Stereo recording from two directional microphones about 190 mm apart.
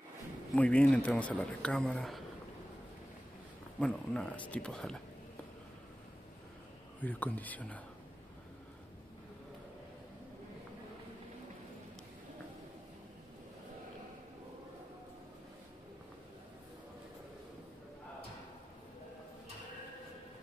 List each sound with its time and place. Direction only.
0.6 s speech: 5° left (ahead or behind)
3.8 s speech: 5° left (ahead or behind)
7.0 s speech: 10° left (ahead or behind)